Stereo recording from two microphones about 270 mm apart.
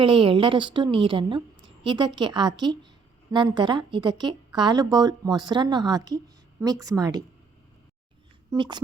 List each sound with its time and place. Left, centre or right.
0.0 s a woman's voice: centre
8.4 s a woman's voice: centre